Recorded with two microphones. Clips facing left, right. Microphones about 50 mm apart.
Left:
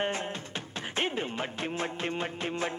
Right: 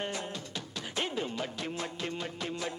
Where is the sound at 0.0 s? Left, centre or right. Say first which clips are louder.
Left 5 dB; left.